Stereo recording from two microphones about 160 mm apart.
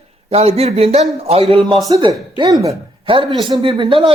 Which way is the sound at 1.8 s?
25° right (ahead or behind).